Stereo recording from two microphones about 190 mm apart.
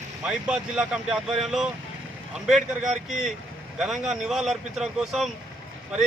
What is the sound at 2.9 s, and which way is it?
Speech, 40° right (ahead or behind).